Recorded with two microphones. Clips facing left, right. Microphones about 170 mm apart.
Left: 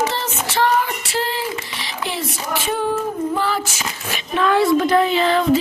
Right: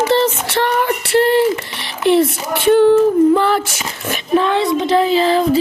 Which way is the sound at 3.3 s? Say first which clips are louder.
Right 6 dB; 60° right (ahead or behind).